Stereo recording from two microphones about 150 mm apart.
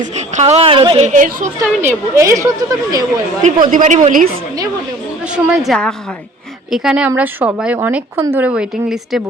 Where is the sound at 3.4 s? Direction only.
60° right (ahead or behind).